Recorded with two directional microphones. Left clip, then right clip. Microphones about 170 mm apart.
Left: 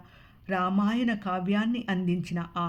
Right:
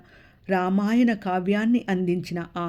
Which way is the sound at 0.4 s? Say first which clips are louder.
Right 4 dB; 40° right (ahead or behind).